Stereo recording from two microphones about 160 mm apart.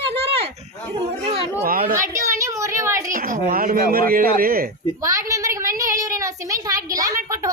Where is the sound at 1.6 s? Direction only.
65° right (ahead or behind).